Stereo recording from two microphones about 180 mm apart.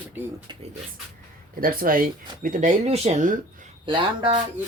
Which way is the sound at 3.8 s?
25° right (ahead or behind).